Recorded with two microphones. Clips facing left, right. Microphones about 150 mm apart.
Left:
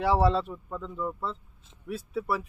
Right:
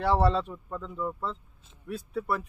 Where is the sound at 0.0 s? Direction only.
5° left (ahead or behind).